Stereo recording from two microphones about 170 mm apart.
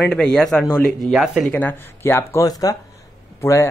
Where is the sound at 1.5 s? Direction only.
10° left (ahead or behind).